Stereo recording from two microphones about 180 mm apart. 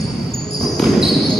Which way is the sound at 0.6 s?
Centre (ahead or behind).